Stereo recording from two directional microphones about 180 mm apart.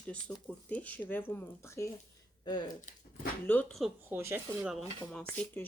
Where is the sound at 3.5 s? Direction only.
5° left (ahead or behind).